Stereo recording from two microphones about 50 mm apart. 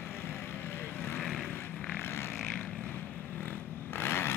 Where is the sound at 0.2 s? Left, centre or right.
Left.